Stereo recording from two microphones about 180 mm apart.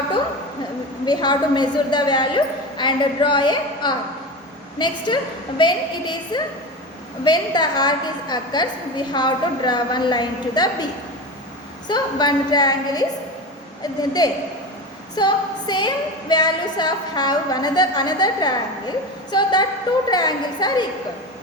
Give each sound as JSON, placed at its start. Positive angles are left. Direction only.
{"t": 1.0, "sound": "a woman's voice", "side_deg": 25}
{"t": 11.9, "sound": "a woman's voice", "side_deg": 25}
{"t": 15.1, "sound": "a sound", "side_deg": 25}
{"t": 16.3, "sound": "a woman's voice", "side_deg": 25}